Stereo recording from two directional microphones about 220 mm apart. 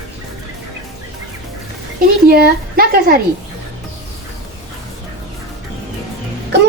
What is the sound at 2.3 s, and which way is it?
Speech, 45° right (ahead or behind).